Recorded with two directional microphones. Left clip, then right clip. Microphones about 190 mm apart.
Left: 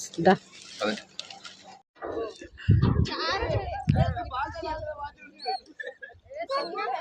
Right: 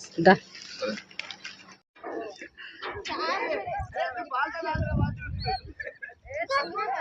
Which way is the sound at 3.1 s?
20° left (ahead or behind).